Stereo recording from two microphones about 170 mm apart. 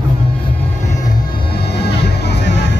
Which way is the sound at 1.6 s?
70° left (ahead or behind).